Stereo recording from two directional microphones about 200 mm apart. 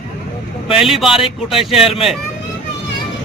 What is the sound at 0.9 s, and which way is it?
Speech, centre (ahead or behind).